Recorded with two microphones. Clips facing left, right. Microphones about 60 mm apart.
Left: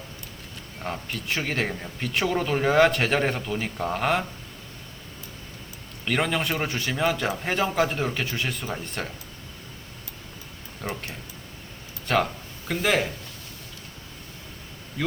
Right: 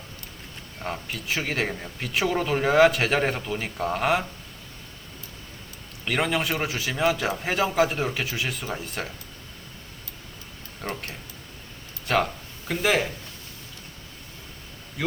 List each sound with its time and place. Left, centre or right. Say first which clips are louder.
0.8 s speech: even; centre
6.1 s speech: even; centre
10.8 s speech: even; centre
12.0 s speech: even; centre
15.0 s speech: even; centre